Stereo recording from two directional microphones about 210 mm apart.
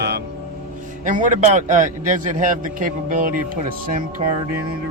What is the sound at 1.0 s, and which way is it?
A man's voice, 40° right (ahead or behind).